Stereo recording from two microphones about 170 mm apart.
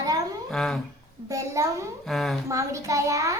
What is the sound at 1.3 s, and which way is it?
Speech, 20° right (ahead or behind).